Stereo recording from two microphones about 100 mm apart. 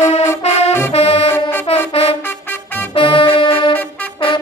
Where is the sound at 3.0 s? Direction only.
55° left (ahead or behind).